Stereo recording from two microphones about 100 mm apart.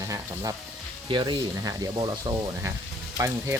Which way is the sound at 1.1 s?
55° right (ahead or behind).